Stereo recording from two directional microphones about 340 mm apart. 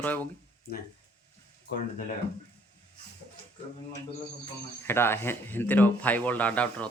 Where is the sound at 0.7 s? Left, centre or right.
Left.